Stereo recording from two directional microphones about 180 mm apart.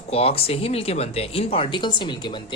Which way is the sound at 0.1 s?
35° left (ahead or behind).